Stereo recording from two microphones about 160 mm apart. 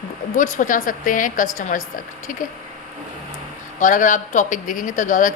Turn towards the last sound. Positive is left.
turn(degrees=55)  # may be behind; listen again after turning